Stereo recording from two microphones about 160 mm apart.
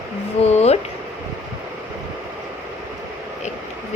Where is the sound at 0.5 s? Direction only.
40° left (ahead or behind).